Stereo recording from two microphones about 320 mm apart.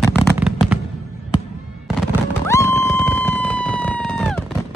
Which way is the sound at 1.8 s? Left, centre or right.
Centre.